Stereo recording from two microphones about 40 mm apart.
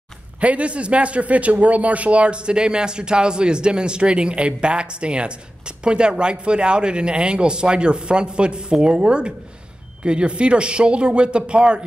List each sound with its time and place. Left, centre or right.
0.4 s speech: right